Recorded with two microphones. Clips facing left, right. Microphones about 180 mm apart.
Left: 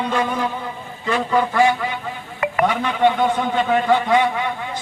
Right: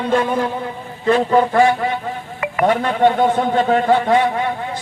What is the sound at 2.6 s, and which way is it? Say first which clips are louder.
A man's voice: right 4 dB; 45° right (ahead or behind).